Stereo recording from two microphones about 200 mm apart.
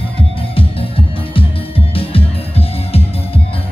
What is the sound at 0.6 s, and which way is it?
Music, 25° left (ahead or behind).